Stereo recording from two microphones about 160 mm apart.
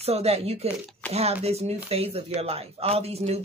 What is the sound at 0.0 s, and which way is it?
Speech, 40° right (ahead or behind).